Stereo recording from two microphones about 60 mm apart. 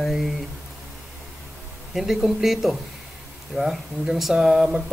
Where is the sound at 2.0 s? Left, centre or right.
Centre.